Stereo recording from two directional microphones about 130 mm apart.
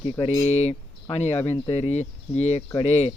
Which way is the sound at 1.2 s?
15° left (ahead or behind).